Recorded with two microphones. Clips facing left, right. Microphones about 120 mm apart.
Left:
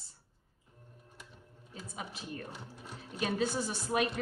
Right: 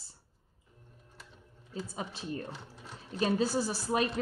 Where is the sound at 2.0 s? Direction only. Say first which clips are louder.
Right 2 dB; 30° right (ahead or behind).